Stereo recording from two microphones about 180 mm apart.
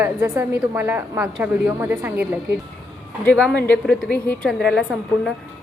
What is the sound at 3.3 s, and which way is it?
A woman's voice, 5° left (ahead or behind).